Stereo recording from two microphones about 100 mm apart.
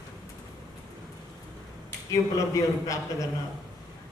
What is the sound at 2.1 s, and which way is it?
A man's voice, 35° left (ahead or behind).